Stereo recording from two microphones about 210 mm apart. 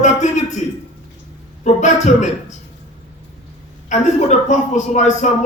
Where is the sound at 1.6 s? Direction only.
35° left (ahead or behind).